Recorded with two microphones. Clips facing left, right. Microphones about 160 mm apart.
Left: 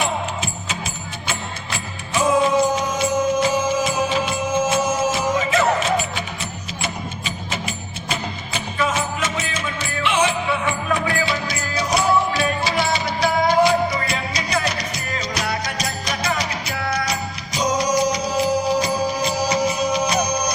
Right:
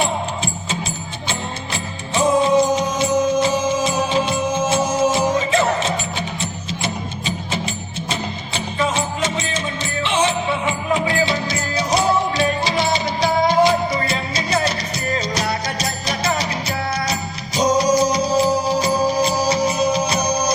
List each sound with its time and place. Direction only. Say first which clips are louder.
0.0 s music: right 2 dB; 30° right (ahead or behind)